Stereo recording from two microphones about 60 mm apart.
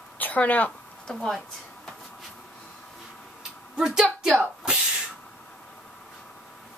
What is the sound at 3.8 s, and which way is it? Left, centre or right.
Speech, centre.